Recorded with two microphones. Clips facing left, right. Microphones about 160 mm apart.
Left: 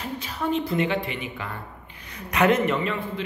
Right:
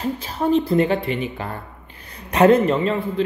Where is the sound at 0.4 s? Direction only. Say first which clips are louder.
Right 7 dB; 35° right (ahead or behind).